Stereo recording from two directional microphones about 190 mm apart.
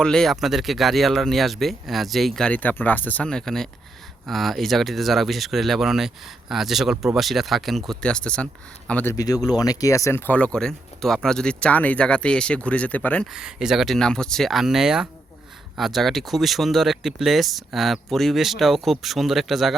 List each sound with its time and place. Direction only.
0.0 s speech: 5° left (ahead or behind)
9.1 s speech: 20° left (ahead or behind)
13.3 s speech: 5° right (ahead or behind)